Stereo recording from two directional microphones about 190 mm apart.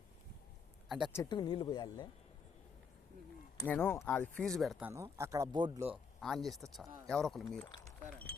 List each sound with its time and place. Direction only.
0.9 s speech: 5° right (ahead or behind)
1.1 s speech: 20° left (ahead or behind)
3.6 s speech: 10° left (ahead or behind)
5.1 s speech: 15° right (ahead or behind)
6.1 s speech: centre (ahead or behind)